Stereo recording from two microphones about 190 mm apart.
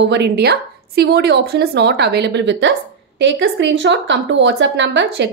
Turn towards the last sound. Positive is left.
turn(degrees=-70)  # may be behind; listen again after turning